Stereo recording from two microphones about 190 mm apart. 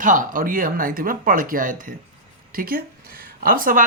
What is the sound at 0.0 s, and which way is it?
Speech, 45° right (ahead or behind).